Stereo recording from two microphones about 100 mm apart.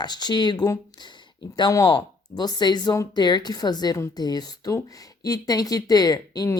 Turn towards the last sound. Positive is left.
turn(degrees=40)  # may be behind; listen again after turning